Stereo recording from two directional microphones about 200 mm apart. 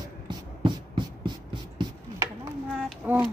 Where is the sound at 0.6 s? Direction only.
25° right (ahead or behind).